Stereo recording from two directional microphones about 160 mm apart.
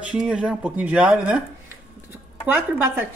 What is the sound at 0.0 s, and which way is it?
Speech, 5° right (ahead or behind).